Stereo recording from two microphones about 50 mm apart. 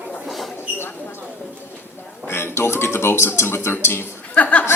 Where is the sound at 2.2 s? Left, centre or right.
Left.